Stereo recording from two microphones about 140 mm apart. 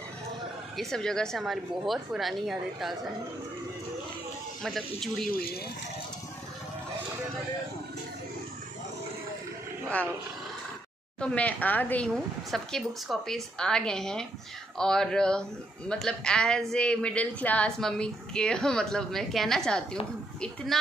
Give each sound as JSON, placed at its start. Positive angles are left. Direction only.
{"t": 0.7, "sound": "a woman's voice", "side_deg": 5}
{"t": 4.6, "sound": "a woman's voice", "side_deg": 0}
{"t": 5.3, "sound": "speech", "side_deg": 90}
{"t": 11.1, "sound": "a woman's voice", "side_deg": 10}
{"t": 12.4, "sound": "a woman's voice", "side_deg": 0}